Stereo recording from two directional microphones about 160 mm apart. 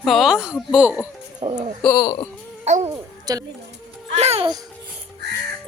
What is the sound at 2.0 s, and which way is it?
Speech, 25° left (ahead or behind).